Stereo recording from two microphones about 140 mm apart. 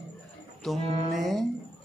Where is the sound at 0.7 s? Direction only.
50° right (ahead or behind).